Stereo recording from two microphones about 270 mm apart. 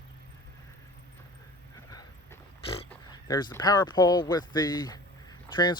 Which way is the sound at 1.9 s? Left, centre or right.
Centre.